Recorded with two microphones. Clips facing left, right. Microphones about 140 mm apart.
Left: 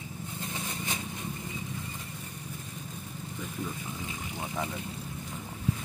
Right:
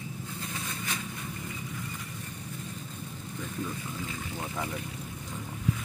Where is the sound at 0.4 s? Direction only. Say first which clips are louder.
Left 2 dB; 25° left (ahead or behind).